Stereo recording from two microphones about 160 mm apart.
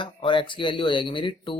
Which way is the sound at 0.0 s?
30° left (ahead or behind).